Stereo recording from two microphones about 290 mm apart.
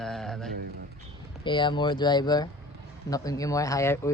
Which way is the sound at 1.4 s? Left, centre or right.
Centre.